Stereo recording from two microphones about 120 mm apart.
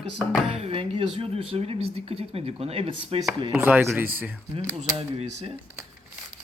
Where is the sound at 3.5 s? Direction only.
15° right (ahead or behind).